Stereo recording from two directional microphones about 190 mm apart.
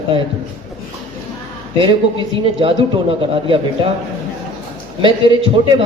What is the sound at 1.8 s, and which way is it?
A man's voice, 25° right (ahead or behind).